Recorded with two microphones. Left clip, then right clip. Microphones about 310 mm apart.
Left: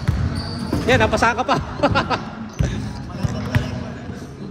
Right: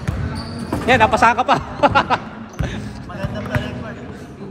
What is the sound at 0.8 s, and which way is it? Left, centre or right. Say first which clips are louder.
Basketball bounce: right 4 dB; right.